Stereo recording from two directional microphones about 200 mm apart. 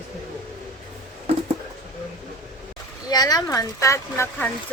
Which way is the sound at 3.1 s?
20° left (ahead or behind).